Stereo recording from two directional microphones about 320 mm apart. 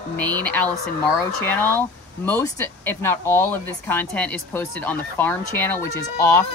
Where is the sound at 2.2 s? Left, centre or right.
Centre.